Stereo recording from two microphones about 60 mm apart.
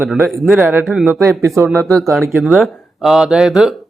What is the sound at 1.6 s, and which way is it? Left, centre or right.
Speech, right.